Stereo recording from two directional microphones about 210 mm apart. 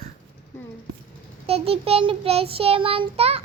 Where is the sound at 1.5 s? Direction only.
30° right (ahead or behind).